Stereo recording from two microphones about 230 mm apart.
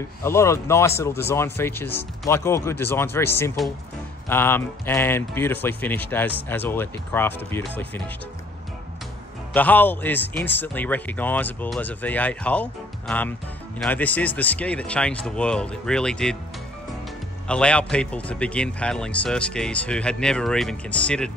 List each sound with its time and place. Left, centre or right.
0.2 s speech: centre
9.5 s a man's voice: centre
17.5 s a man's voice: centre